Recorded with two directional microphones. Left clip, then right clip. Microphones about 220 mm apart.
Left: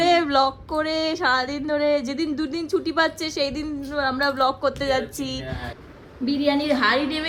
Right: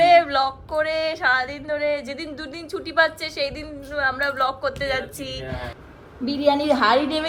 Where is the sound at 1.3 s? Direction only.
15° left (ahead or behind).